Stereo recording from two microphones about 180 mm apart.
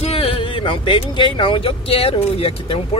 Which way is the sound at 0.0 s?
35° left (ahead or behind).